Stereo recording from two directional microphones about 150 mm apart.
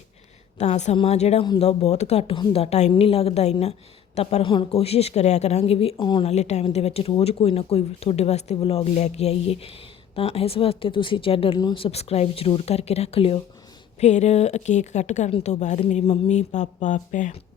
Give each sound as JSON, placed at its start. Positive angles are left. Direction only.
{"t": 0.6, "sound": "a woman's voice", "side_deg": 50}